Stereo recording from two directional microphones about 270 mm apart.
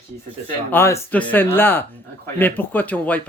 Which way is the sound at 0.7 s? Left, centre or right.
Centre.